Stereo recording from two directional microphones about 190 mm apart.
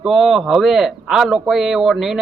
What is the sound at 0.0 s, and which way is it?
A man's voice, centre (ahead or behind).